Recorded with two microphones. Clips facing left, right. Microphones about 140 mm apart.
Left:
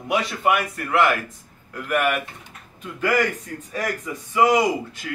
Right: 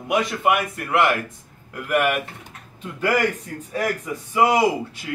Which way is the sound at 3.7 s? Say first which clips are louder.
Right 3 dB; 25° right (ahead or behind).